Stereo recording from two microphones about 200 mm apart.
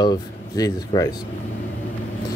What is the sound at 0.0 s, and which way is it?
Speech, 20° left (ahead or behind).